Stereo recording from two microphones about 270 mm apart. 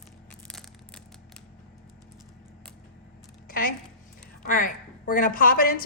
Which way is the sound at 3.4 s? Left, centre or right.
Left.